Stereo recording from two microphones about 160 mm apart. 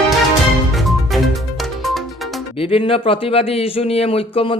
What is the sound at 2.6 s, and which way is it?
Speech, 35° left (ahead or behind).